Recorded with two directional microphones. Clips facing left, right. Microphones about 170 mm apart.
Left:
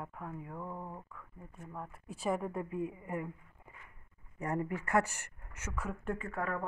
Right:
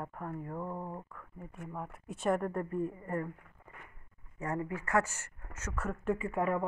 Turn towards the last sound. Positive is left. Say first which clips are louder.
# right 5 dB
turn(degrees=-15)  # may be behind; listen again after turning